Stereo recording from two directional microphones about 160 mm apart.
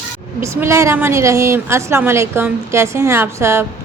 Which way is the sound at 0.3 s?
15° right (ahead or behind).